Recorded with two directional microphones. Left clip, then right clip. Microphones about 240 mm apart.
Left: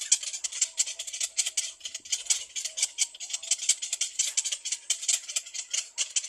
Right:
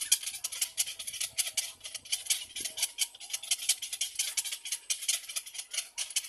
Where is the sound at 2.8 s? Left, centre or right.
Centre.